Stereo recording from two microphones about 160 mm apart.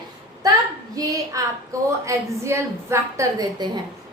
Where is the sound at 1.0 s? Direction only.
20° right (ahead or behind).